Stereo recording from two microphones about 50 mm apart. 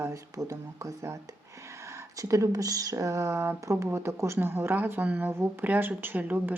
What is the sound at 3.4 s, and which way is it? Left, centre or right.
Speech, right.